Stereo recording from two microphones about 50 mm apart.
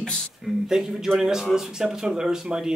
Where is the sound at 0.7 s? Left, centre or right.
Centre.